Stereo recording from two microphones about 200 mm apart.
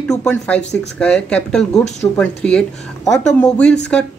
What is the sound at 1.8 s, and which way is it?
Speech, 35° left (ahead or behind).